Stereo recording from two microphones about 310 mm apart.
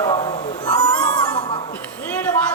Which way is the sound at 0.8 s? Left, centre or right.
Centre.